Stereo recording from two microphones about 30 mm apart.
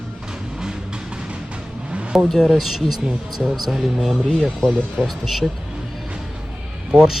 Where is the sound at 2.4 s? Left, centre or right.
Centre.